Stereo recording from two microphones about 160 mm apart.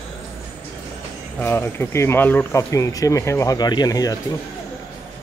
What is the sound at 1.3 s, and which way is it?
Speech, 15° left (ahead or behind).